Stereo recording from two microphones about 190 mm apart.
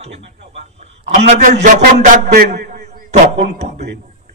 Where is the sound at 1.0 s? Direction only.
35° right (ahead or behind); by 2.9 s 50° right (ahead or behind).